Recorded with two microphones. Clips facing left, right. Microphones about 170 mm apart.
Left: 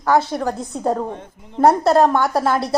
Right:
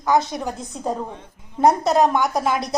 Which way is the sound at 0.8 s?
55° left (ahead or behind).